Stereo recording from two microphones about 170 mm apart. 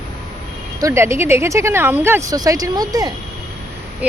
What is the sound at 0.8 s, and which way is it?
Speech, 15° right (ahead or behind).